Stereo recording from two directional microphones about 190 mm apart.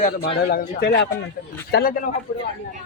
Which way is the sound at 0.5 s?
55° left (ahead or behind).